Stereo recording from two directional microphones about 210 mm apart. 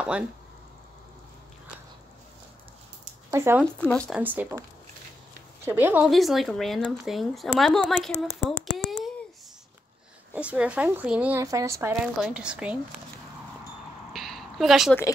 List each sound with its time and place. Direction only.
3.3 s speech: 10° right (ahead or behind)
3.8 s speech: 5° left (ahead or behind)
4.2 s speech: 10° right (ahead or behind)
5.7 s speech: 10° right (ahead or behind)
10.3 s speech: 5° right (ahead or behind)
11.9 s speech: 5° right (ahead or behind)
14.1 s a sound: centre (ahead or behind)